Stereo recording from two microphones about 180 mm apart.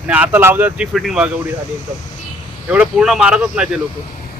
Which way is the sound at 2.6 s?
5° right (ahead or behind).